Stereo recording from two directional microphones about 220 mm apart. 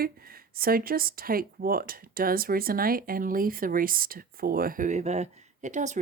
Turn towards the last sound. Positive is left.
turn(degrees=-35)  # may be behind; listen again after turning